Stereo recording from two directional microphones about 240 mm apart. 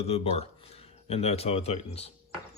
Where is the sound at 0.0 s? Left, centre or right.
Left.